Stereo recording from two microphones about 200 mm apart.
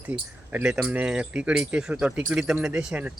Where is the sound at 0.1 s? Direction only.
5° right (ahead or behind).